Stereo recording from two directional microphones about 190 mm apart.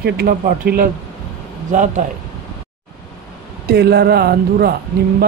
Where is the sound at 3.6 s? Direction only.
60° right (ahead or behind).